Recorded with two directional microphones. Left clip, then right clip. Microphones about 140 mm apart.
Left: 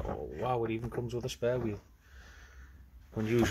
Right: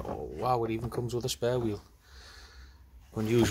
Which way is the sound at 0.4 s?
15° right (ahead or behind).